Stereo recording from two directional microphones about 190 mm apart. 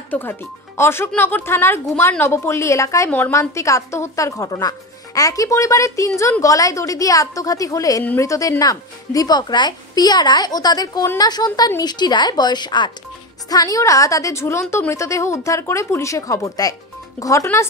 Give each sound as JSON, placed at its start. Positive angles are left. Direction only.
{"t": 0.1, "sound": "speech", "side_deg": 10}